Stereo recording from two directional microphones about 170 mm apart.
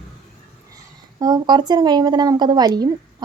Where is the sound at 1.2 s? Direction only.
25° right (ahead or behind).